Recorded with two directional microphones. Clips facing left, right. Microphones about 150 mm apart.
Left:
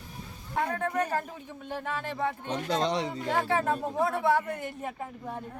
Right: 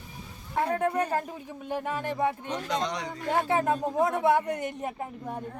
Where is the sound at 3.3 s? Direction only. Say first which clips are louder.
Right 3 dB; 20° right (ahead or behind).